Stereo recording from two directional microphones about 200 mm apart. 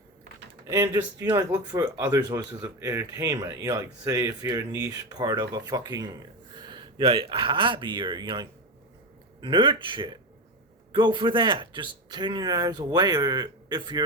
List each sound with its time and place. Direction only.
0.7 s speech: 15° right (ahead or behind)